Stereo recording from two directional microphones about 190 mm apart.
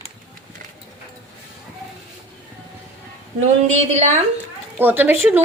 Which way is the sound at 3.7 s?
40° right (ahead or behind).